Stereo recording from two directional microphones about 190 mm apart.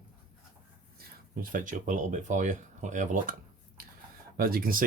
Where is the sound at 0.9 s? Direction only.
45° right (ahead or behind).